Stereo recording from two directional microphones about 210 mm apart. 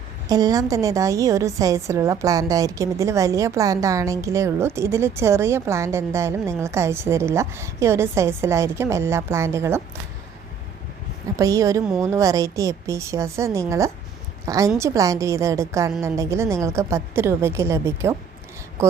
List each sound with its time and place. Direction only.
0.3 s a woman's voice: 15° right (ahead or behind)
11.3 s a woman's voice: 15° right (ahead or behind)